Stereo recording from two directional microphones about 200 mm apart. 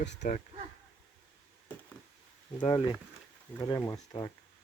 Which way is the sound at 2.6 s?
25° left (ahead or behind).